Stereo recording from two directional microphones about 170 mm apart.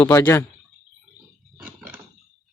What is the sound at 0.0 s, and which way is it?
Speech, 15° left (ahead or behind).